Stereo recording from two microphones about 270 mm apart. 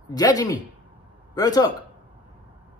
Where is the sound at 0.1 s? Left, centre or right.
Centre.